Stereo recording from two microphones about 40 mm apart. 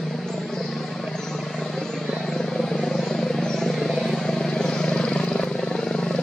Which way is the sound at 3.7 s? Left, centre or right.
Centre.